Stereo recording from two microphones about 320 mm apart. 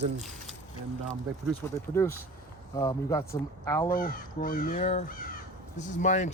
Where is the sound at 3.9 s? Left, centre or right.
Left.